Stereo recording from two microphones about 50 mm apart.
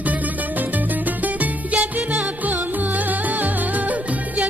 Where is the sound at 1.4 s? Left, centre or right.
Right.